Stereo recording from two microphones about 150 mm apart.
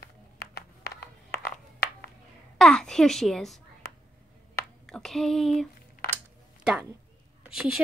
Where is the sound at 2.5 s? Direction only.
5° left (ahead or behind).